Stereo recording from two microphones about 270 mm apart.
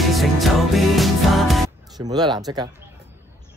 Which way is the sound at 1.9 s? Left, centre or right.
Centre.